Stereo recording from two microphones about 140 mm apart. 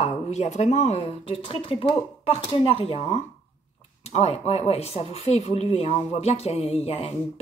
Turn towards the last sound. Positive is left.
turn(degrees=45)  # may be behind; listen again after turning